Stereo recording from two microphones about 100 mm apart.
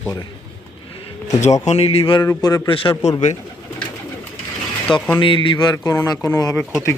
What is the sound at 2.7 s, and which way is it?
Speech, 60° left (ahead or behind).